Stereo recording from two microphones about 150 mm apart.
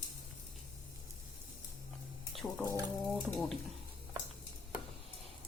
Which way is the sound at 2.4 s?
5° left (ahead or behind).